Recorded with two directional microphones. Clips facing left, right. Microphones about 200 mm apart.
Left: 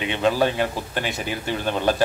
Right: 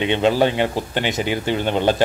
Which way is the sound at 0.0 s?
25° right (ahead or behind).